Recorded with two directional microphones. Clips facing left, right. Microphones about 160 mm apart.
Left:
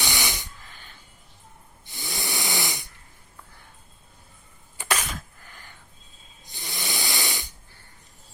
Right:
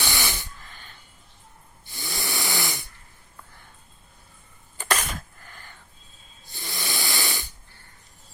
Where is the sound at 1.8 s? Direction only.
20° left (ahead or behind).